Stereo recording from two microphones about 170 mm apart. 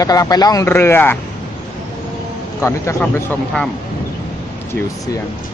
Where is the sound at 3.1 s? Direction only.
10° left (ahead or behind).